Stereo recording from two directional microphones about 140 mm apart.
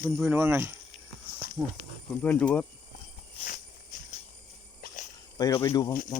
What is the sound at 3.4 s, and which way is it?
Walk, 80° left.